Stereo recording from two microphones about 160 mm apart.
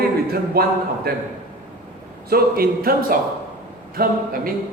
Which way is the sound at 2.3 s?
70° right (ahead or behind).